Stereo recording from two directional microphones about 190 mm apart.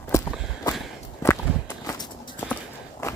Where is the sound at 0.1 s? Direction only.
15° left (ahead or behind).